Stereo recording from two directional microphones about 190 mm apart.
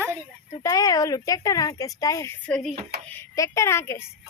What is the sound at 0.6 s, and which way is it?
Speech, 20° left (ahead or behind).